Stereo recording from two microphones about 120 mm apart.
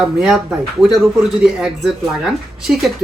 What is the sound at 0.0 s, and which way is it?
Speech, 5° right (ahead or behind).